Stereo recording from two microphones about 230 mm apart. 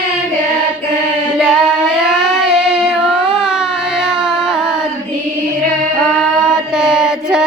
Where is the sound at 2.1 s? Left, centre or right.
Centre.